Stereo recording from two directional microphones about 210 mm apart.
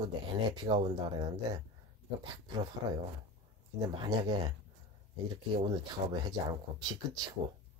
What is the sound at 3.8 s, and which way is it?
Speech, 20° right (ahead or behind).